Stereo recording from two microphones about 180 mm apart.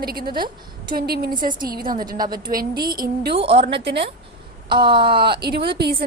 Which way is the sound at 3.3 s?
30° right (ahead or behind).